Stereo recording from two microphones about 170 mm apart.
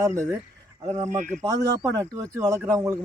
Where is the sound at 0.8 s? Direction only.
40° right (ahead or behind).